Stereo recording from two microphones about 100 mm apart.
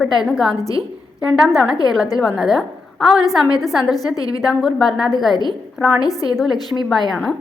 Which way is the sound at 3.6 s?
Centre (ahead or behind).